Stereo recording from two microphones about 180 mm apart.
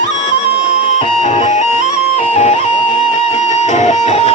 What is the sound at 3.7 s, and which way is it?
Music, 40° left (ahead or behind).